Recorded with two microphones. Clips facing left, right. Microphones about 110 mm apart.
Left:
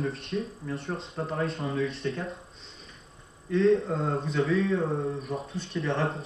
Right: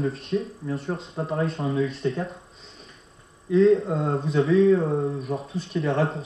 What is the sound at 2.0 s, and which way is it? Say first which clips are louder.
Mantra: right 5 dB; 20° right (ahead or behind).